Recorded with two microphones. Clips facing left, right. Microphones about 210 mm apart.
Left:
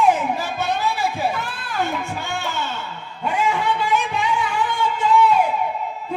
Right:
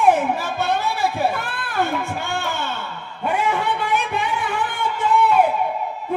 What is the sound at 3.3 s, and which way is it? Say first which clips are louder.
Music: left 1 dB; 55° right (ahead or behind).